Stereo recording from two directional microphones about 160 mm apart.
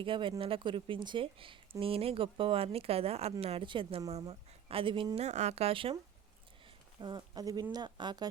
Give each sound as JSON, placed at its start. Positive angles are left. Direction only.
{"t": 0.0, "sound": "speech", "side_deg": -30}
{"t": 7.0, "sound": "speech", "side_deg": -25}